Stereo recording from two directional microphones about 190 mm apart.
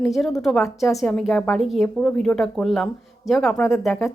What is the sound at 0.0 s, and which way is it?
A woman's voice, centre (ahead or behind).